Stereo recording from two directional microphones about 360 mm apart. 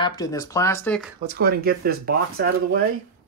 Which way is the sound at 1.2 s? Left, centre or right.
Right.